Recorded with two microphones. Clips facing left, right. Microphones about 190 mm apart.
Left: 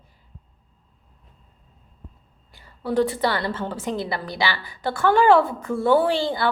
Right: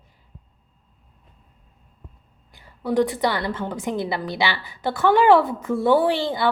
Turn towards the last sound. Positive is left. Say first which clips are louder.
# even
turn(degrees=-20)  # may be behind; listen again after turning